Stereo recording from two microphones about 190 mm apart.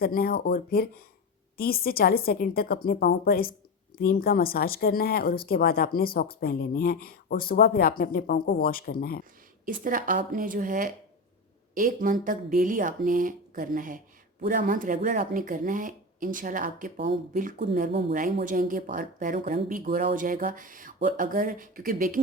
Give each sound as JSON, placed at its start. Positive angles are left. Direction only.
{"t": 0.0, "sound": "speech", "side_deg": 55}
{"t": 9.6, "sound": "speech", "side_deg": -45}
{"t": 18.1, "sound": "speech", "side_deg": -45}